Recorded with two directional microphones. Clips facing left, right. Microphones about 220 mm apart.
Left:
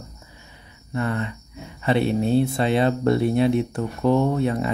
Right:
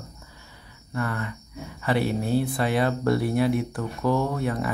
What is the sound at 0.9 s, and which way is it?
Speech, 20° left (ahead or behind).